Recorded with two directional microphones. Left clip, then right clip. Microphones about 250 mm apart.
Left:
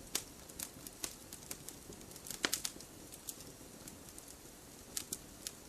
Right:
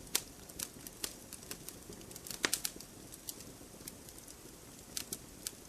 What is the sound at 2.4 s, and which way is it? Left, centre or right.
Bird, centre.